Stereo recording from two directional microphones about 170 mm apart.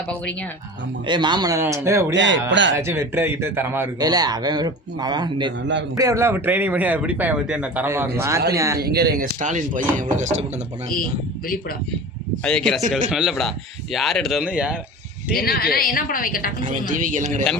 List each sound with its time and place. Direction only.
1.0 s speech: 25° right (ahead or behind)
2.1 s speech: 90° right
2.7 s speech: 15° right (ahead or behind)
4.1 s speech: 25° right (ahead or behind)
8.8 s speech: 65° right (ahead or behind); by 10.4 s 45° right (ahead or behind)
12.5 s speech: 5° left (ahead or behind)
15.3 s a woman's voice: 60° left (ahead or behind)
16.9 s speech: 50° right (ahead or behind)